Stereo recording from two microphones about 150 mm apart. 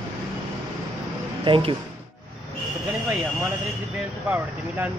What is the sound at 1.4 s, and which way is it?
Speech, 35° right (ahead or behind).